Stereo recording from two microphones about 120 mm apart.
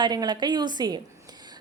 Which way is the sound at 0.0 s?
35° right (ahead or behind).